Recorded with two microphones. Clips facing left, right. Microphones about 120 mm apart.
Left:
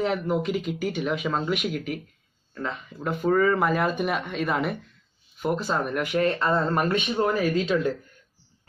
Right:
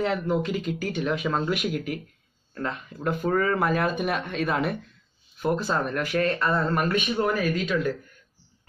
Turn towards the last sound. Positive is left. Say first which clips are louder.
# left 2 dB
turn(degrees=25)  # may be behind; listen again after turning